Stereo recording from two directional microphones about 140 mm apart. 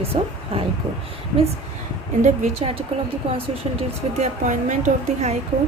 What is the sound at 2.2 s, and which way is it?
Speech, 50° right (ahead or behind).